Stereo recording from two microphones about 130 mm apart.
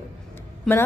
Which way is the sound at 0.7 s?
5° left (ahead or behind).